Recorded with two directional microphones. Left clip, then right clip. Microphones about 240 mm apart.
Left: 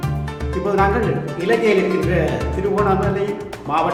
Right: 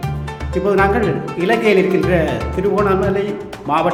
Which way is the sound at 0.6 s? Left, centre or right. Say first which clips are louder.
Right 3 dB; right.